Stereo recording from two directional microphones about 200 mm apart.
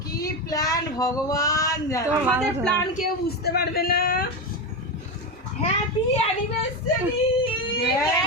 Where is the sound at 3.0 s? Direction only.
50° left (ahead or behind).